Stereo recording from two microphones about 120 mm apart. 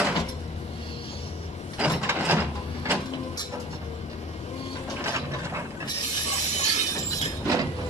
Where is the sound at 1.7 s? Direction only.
15° right (ahead or behind).